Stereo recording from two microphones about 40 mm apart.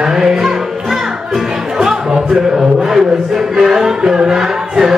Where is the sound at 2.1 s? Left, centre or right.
Right.